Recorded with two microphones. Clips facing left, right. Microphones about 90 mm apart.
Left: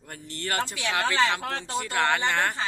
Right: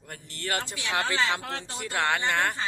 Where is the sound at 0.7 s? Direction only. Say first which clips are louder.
Left 2 dB; 20° right (ahead or behind).